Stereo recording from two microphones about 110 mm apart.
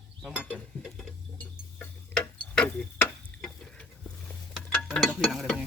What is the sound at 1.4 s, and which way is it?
Tick-tock, 15° left (ahead or behind).